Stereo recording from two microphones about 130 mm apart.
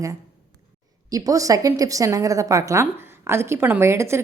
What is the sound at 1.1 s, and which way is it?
A woman's voice, 25° right (ahead or behind).